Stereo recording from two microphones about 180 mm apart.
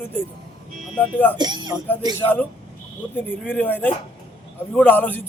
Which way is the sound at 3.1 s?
10° left (ahead or behind).